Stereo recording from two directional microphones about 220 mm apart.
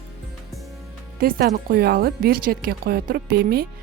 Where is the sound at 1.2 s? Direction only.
40° right (ahead or behind).